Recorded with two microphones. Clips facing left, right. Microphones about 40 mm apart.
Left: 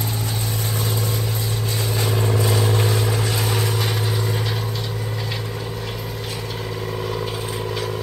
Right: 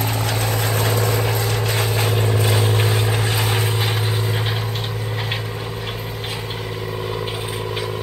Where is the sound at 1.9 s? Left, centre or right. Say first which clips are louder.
Right 2 dB; right.